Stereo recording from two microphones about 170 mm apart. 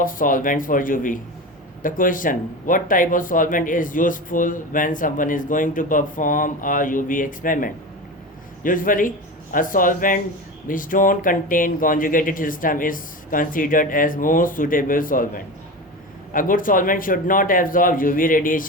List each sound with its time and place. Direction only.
0.0 s speech: 55° left (ahead or behind)
16.3 s speech: 55° left (ahead or behind)